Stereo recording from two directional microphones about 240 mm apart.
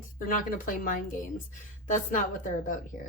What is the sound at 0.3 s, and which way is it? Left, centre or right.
A woman's voice, left.